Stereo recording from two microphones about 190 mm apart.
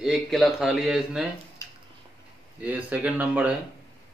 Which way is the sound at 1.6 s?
15° left (ahead or behind).